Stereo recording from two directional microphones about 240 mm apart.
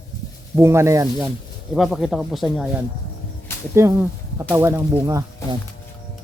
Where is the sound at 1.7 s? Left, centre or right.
Centre.